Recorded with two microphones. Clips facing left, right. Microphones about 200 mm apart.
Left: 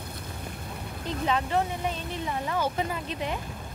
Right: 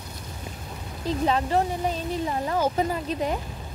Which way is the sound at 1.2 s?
35° right (ahead or behind).